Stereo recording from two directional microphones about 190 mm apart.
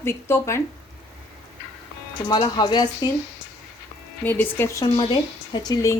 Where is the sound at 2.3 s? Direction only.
25° left (ahead or behind).